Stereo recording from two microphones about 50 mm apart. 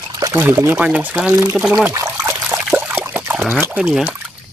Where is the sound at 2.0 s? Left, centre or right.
Right.